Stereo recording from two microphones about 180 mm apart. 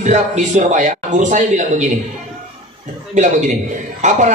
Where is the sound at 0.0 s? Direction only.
40° right (ahead or behind).